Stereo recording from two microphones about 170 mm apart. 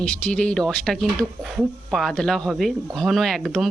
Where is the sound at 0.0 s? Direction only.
5° left (ahead or behind).